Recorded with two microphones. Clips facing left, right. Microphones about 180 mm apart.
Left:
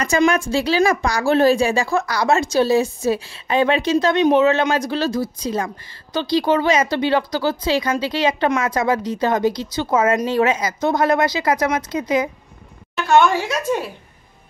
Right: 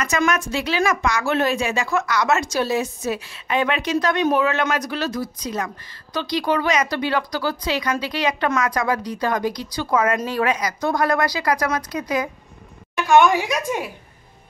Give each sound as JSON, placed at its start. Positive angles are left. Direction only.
{"t": 0.3, "sound": "speech", "side_deg": 30}
{"t": 13.0, "sound": "speech", "side_deg": -15}